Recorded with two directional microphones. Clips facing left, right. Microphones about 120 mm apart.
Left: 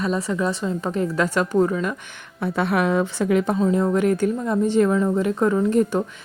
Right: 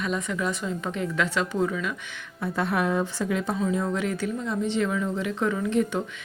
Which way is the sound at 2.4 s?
70° left (ahead or behind).